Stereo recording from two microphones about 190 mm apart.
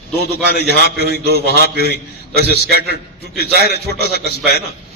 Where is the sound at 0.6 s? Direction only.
55° right (ahead or behind).